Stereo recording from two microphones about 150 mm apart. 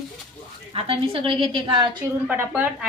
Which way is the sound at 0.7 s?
40° right (ahead or behind).